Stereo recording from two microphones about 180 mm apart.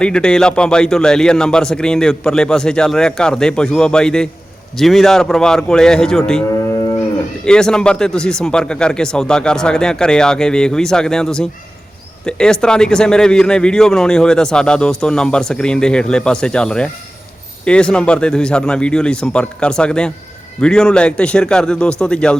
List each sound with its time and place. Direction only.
0.0 s a man's voice: 5° left (ahead or behind)
6.6 s moo: 20° left (ahead or behind)
7.4 s a man's voice: 5° left (ahead or behind)